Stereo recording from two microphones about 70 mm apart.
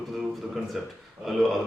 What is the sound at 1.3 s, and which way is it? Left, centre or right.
Speech, centre.